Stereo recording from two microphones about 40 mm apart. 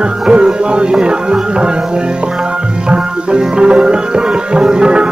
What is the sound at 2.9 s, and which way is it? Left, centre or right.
Music, right.